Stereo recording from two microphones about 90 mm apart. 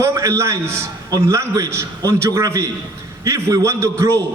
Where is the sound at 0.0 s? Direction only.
35° right (ahead or behind).